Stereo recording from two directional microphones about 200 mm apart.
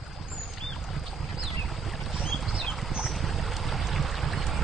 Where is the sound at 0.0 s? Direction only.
Centre (ahead or behind).